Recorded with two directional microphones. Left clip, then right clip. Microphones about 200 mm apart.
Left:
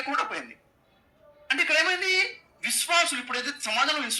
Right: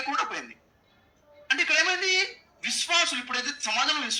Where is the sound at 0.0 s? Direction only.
25° left (ahead or behind).